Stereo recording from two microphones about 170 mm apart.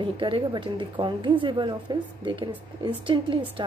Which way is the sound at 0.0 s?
30° right (ahead or behind).